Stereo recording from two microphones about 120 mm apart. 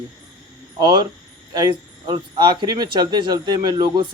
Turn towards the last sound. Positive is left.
turn(degrees=-40)  # may be behind; listen again after turning